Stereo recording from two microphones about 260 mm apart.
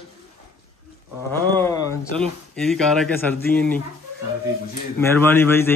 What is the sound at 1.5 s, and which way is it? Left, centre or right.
Speech, centre.